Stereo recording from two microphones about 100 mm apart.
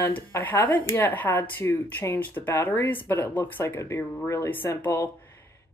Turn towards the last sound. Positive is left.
turn(degrees=30)  # may be behind; listen again after turning